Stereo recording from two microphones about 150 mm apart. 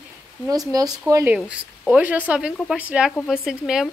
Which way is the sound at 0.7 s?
25° right (ahead or behind).